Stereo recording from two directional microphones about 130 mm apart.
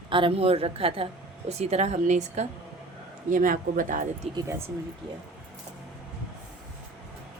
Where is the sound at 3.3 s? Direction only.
90° right.